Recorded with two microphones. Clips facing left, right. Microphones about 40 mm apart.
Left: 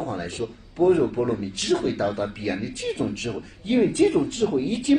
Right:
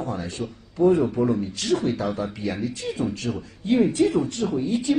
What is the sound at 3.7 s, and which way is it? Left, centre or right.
Speech, left.